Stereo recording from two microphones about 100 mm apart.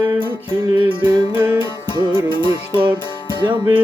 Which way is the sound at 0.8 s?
50° right (ahead or behind).